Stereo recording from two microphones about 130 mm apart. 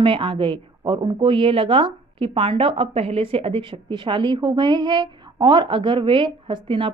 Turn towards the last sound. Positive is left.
turn(degrees=-40)  # may be behind; listen again after turning